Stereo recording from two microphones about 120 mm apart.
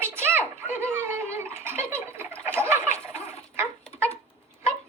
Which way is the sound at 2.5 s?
20° right (ahead or behind).